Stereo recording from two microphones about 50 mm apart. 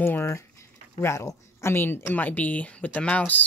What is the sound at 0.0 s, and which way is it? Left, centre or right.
Speech, left.